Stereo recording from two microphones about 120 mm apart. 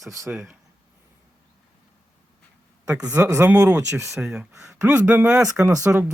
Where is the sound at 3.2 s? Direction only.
25° right (ahead or behind).